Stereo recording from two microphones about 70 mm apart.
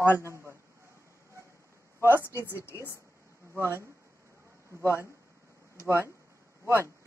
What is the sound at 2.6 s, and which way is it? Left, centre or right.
Speech, left.